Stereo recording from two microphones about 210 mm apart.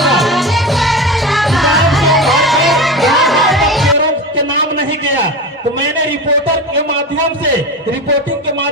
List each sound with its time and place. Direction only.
0.0 s music: centre (ahead or behind)